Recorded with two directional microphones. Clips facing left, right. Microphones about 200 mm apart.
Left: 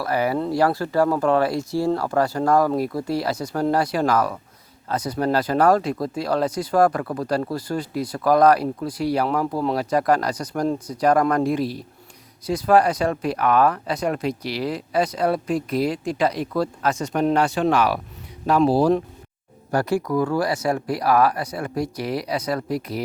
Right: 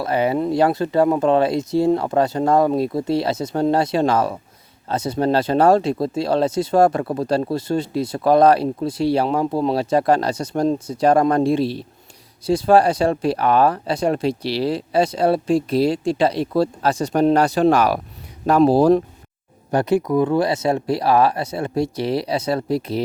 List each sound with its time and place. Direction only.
0.0 s speech: 25° right (ahead or behind); by 19.0 s 45° right (ahead or behind)
19.7 s speech: 20° right (ahead or behind)